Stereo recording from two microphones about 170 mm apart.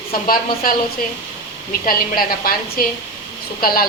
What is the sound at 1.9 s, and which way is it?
A woman's voice, 60° left (ahead or behind).